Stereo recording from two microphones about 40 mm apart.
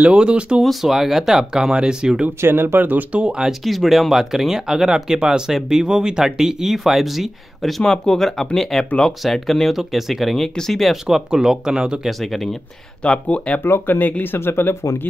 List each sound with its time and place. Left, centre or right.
0.1 s speech: right
0.8 s speech: centre
2.4 s speech: right
3.1 s speech: right
3.6 s speech: centre
7.8 s speech: centre
9.8 s speech: centre
10.4 s speech: centre
10.9 s speech: centre
12.1 s speech: centre
13.0 s speech: left
13.7 s speech: left
13.9 s speech: left